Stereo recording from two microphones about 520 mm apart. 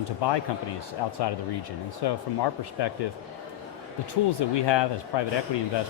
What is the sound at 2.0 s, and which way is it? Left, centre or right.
Speech, left.